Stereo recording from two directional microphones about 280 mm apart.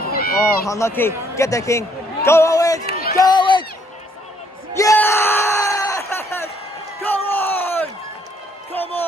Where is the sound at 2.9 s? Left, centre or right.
Left.